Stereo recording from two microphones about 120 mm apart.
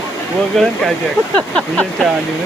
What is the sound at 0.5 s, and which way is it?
Speech, centre (ahead or behind).